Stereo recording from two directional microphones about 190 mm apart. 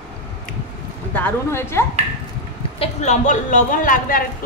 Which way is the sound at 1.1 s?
10° left (ahead or behind).